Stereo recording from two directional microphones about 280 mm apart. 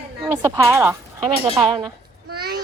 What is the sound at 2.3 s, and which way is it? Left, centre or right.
Child singing, right.